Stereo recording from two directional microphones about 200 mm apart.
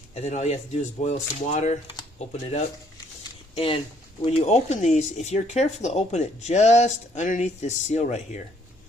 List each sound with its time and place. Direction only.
0.1 s speech: 35° left (ahead or behind)